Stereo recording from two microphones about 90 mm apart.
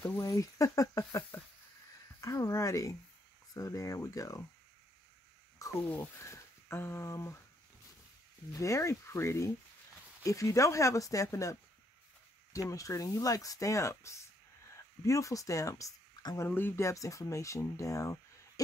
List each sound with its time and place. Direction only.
0.0 s speech: 35° left (ahead or behind)
2.1 s a sound: 35° left (ahead or behind)
3.5 s speech: 40° left (ahead or behind)
5.9 s speech: 25° left (ahead or behind)
8.5 s speech: 35° left (ahead or behind)
12.5 s speech: 40° left (ahead or behind)
16.3 s speech: 20° left (ahead or behind)